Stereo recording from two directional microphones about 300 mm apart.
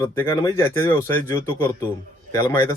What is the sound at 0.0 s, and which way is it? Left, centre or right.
Speech, centre.